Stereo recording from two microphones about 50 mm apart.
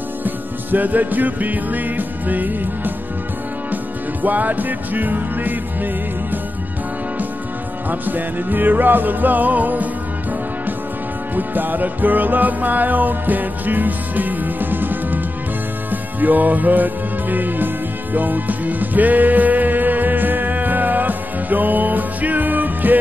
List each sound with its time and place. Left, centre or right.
0.2 s music: right
7.9 s music: right
11.3 s music: right